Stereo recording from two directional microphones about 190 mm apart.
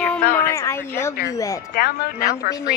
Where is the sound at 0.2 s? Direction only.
50° left (ahead or behind).